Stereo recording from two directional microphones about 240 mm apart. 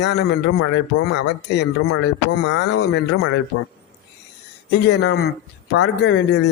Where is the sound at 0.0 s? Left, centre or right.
Left.